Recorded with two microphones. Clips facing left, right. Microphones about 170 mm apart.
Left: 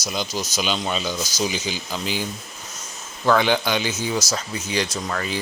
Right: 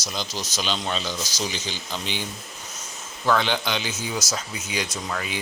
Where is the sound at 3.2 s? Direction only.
10° left (ahead or behind); by 5.3 s 5° right (ahead or behind).